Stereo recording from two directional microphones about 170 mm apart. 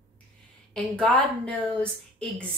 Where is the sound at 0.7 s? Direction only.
5° left (ahead or behind).